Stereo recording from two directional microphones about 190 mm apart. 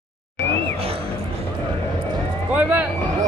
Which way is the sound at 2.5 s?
10° right (ahead or behind).